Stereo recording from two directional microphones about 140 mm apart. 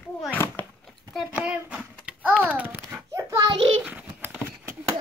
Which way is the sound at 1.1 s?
5° right (ahead or behind).